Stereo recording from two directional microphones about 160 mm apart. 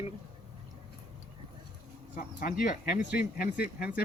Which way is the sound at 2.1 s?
60° left (ahead or behind).